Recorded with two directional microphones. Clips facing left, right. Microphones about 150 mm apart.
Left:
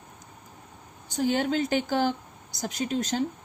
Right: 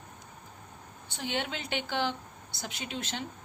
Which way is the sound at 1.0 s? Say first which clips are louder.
Left 9 dB; 40° left (ahead or behind).